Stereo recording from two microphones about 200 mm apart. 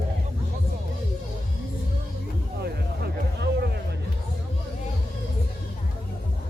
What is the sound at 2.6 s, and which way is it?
Music, 55° right (ahead or behind).